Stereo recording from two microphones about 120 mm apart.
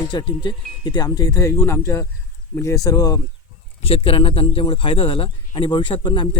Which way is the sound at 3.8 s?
50° left (ahead or behind).